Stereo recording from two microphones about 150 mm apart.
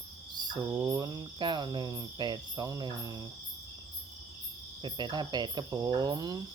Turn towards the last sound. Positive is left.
turn(degrees=-25)  # may be behind; listen again after turning